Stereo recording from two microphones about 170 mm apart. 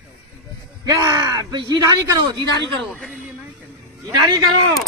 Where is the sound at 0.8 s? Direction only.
25° right (ahead or behind).